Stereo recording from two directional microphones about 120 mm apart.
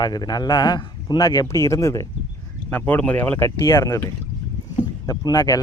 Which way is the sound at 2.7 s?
15° left (ahead or behind).